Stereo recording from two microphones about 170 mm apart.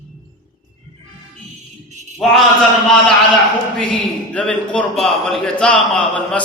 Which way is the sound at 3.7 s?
5° left (ahead or behind).